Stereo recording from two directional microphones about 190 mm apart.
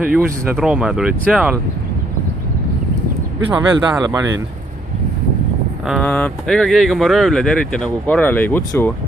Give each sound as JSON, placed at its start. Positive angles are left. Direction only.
{"t": 0.0, "sound": "speech", "side_deg": -5}
{"t": 3.5, "sound": "speech", "side_deg": -20}
{"t": 6.0, "sound": "speech", "side_deg": 5}